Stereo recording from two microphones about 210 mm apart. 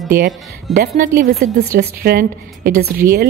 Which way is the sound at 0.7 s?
40° right (ahead or behind).